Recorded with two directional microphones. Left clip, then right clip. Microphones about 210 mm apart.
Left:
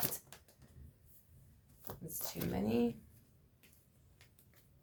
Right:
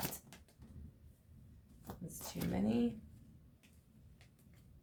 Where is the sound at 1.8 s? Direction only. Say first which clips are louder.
Left 2 dB; 10° left (ahead or behind).